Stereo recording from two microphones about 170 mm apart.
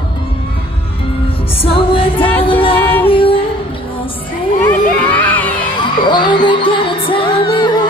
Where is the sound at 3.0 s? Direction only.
30° left (ahead or behind).